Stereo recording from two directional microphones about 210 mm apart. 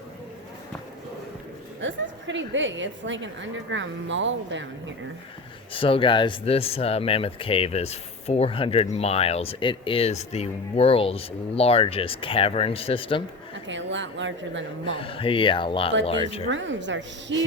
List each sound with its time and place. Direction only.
1.8 s a woman's voice: 60° right (ahead or behind)
5.7 s speech: 25° left (ahead or behind)
13.7 s a woman's voice: 60° right (ahead or behind)
14.8 s speech: 25° left (ahead or behind)
16.5 s a woman's voice: 60° right (ahead or behind)